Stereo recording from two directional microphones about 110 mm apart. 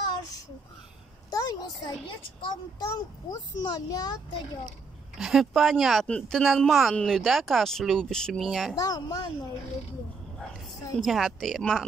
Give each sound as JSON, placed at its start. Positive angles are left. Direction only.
{"t": 1.3, "sound": "a woman's voice", "side_deg": 35}
{"t": 4.6, "sound": "speech", "side_deg": -5}
{"t": 8.7, "sound": "a child's voice", "side_deg": 35}
{"t": 11.0, "sound": "speech", "side_deg": 0}